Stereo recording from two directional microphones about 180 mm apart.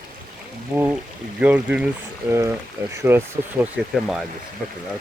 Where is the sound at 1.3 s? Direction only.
10° right (ahead or behind).